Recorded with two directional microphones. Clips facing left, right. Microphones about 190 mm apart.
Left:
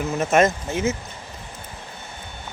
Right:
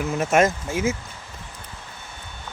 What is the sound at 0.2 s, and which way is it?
Speech, 10° right (ahead or behind).